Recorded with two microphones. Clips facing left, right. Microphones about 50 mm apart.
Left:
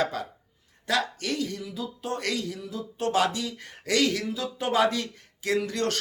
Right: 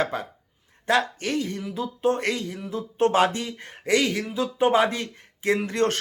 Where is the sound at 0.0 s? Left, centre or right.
Right.